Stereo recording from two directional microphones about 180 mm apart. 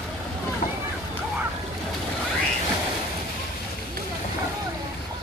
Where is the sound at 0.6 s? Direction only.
35° left (ahead or behind).